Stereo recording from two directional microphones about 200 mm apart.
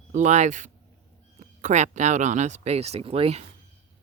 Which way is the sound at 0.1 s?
35° right (ahead or behind).